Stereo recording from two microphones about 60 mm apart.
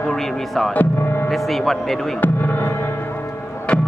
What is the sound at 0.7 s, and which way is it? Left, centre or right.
Gong, left.